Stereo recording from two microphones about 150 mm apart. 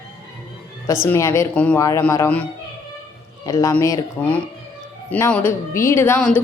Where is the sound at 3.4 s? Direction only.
25° left (ahead or behind).